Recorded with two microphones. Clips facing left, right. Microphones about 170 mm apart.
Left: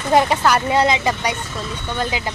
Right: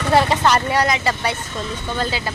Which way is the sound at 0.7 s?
20° left (ahead or behind).